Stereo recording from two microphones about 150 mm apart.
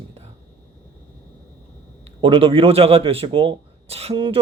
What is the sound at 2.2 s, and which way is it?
Speech, 35° right (ahead or behind).